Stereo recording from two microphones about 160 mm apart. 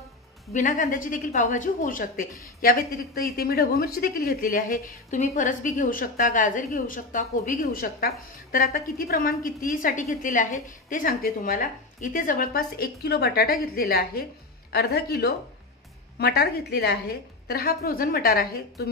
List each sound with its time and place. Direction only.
0.5 s speech: 55° left (ahead or behind); by 14.2 s 75° left (ahead or behind)
14.7 s a woman's voice: 90° left; by 18.9 s 70° left (ahead or behind)